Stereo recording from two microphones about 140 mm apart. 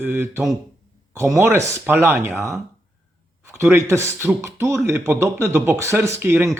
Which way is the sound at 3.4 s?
20° right (ahead or behind).